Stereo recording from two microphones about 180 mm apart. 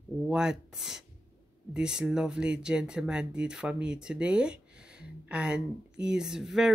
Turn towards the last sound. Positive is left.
turn(degrees=-5)  # may be behind; listen again after turning